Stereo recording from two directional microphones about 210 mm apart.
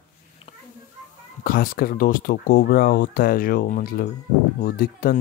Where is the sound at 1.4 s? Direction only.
45° left (ahead or behind).